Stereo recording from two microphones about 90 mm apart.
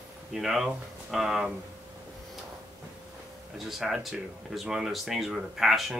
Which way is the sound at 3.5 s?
5° right (ahead or behind).